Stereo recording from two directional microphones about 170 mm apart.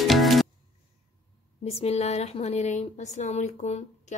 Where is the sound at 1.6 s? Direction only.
35° left (ahead or behind).